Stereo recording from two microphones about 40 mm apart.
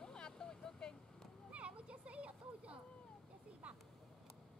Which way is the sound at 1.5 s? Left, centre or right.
Right.